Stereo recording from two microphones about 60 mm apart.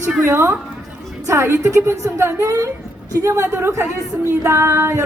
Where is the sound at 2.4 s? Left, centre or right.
Right.